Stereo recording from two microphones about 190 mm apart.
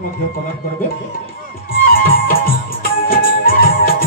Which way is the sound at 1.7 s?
50° left (ahead or behind).